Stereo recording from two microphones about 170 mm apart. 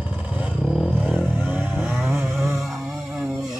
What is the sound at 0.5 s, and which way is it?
Vehicle, 5° right (ahead or behind).